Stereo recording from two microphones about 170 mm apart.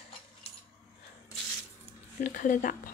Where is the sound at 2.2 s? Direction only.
50° left (ahead or behind).